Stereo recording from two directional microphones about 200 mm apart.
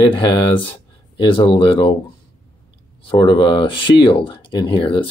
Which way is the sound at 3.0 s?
25° left (ahead or behind).